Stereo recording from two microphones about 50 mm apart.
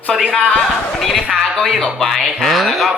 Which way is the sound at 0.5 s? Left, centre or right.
Centre.